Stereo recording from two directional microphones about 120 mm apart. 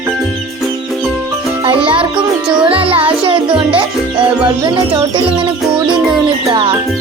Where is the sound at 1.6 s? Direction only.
45° right (ahead or behind).